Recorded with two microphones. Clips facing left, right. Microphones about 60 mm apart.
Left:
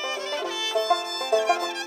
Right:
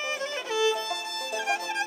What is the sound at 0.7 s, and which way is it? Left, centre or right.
Music, left.